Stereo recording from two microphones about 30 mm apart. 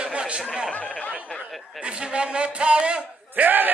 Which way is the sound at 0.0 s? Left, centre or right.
Right.